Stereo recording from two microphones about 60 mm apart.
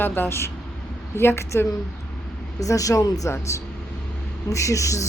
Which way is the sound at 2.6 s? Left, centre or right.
Left.